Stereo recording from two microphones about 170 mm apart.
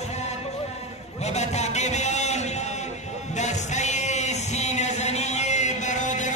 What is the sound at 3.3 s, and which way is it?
Music, 45° left (ahead or behind).